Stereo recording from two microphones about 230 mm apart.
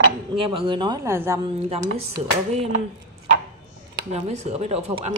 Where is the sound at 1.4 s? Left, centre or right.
Right.